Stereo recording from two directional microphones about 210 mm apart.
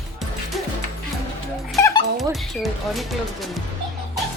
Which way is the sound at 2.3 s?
Centre (ahead or behind).